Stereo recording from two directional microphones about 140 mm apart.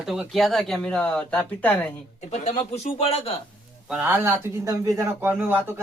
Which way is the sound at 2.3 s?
50° left (ahead or behind).